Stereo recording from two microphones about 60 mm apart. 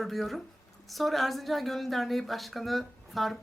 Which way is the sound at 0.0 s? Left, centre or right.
Centre.